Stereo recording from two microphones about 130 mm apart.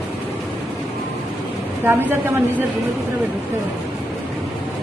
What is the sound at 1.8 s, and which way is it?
Speech, 15° right (ahead or behind).